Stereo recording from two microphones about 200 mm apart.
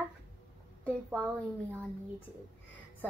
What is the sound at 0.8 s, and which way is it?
Speech, 5° left (ahead or behind).